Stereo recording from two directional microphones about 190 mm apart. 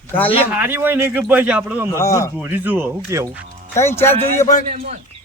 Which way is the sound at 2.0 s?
15° left (ahead or behind).